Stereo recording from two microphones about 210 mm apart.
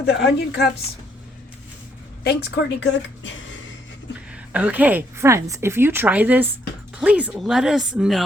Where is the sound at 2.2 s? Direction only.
50° left (ahead or behind).